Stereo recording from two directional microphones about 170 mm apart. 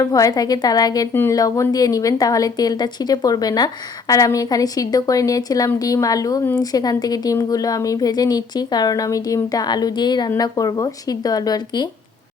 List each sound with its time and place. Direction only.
0.0 s speech: 20° left (ahead or behind)